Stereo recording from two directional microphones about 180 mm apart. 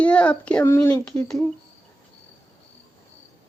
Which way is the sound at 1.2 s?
5° left (ahead or behind).